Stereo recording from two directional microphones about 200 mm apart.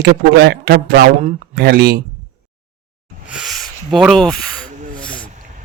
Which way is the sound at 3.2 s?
Centre (ahead or behind).